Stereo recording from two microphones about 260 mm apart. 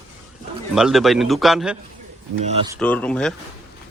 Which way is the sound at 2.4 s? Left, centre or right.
Right.